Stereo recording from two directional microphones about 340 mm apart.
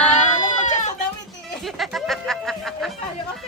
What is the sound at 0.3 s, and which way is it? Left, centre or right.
Goat, left.